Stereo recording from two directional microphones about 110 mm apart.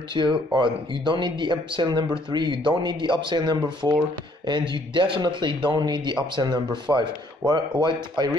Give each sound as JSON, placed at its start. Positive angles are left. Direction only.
{"t": 0.1, "sound": "speech", "side_deg": -45}